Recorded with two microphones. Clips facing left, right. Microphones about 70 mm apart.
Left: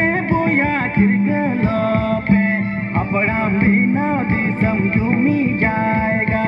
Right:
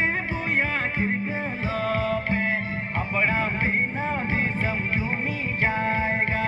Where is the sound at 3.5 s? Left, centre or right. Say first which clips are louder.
Left 10 dB; left.